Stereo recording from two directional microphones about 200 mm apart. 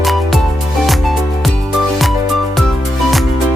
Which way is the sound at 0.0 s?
Centre (ahead or behind).